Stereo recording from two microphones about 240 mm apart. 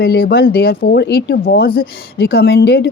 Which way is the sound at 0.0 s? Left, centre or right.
Left.